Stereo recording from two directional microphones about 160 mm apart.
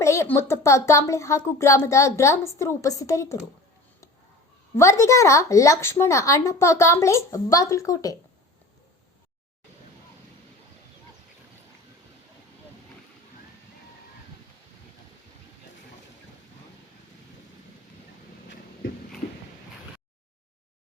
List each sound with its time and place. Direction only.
0.0 s a woman's voice: 20° left (ahead or behind)
4.7 s a woman's voice: 20° left (ahead or behind)